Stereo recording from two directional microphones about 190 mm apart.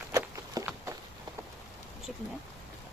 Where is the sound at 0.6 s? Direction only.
20° right (ahead or behind).